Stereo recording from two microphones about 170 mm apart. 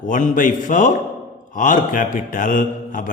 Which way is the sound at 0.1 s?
50° left (ahead or behind).